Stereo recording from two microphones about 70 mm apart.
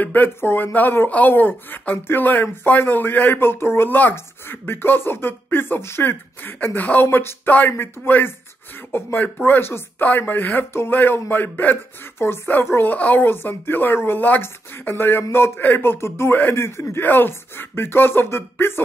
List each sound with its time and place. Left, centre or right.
0.0 s speech: left